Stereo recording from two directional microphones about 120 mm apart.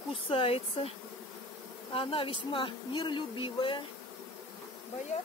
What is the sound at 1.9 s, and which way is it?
Speech, 45° left (ahead or behind).